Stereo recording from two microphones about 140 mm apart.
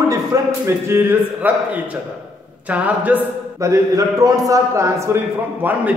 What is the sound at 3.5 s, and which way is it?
A man's voice, 25° right (ahead or behind).